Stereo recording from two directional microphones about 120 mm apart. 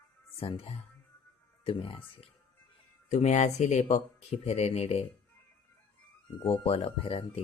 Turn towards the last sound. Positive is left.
turn(degrees=55)  # may be behind; listen again after turning